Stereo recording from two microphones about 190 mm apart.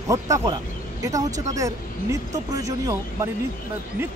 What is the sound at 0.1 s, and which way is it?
Speech, 15° right (ahead or behind).